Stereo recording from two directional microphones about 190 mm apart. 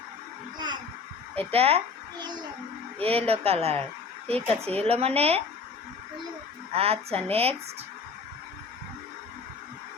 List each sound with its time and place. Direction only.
1.4 s a child's voice: 30° right (ahead or behind)
6.7 s speech: 30° right (ahead or behind)